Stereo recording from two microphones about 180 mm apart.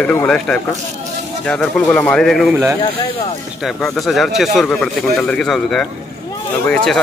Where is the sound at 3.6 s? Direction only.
Centre (ahead or behind).